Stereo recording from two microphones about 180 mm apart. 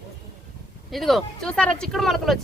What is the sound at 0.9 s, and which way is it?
Speech, centre (ahead or behind).